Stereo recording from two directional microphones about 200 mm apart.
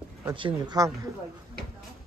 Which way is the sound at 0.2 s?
20° right (ahead or behind).